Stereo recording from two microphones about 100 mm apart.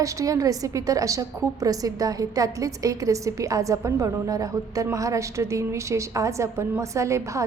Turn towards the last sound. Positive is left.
turn(degrees=-30)  # may be behind; listen again after turning